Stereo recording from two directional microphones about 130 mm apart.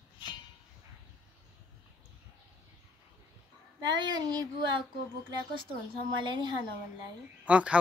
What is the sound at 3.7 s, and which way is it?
Child singing, 35° right (ahead or behind).